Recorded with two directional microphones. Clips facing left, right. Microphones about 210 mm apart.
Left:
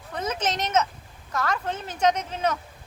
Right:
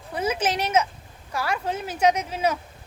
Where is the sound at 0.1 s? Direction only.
10° right (ahead or behind).